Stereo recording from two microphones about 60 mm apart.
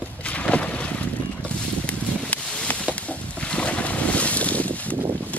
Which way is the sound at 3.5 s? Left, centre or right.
Left.